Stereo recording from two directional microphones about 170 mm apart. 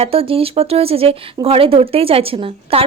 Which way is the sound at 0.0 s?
35° right (ahead or behind).